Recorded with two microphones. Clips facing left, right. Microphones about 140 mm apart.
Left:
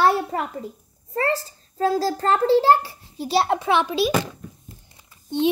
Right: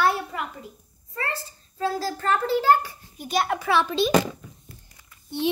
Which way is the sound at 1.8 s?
40° left (ahead or behind).